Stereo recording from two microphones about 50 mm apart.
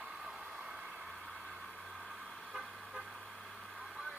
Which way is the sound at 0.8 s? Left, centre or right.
Centre.